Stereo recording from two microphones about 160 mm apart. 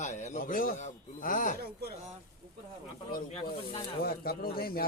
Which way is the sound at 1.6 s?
80° right.